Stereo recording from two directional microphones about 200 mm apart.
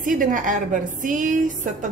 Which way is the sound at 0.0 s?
40° right (ahead or behind).